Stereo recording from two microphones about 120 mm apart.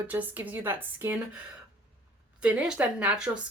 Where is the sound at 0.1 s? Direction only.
15° right (ahead or behind).